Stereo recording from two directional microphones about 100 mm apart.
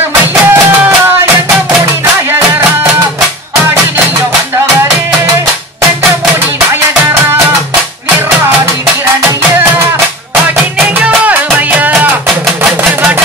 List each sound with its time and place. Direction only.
0.3 s music: 20° right (ahead or behind)
11.1 s music: 15° right (ahead or behind)